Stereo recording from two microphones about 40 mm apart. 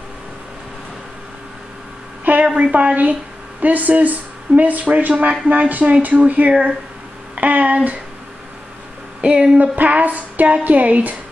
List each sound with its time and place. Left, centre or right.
2.4 s speech: right
2.7 s music: right
3.6 s speech: right
5.5 s music: right
9.2 s speech: right
9.6 s music: right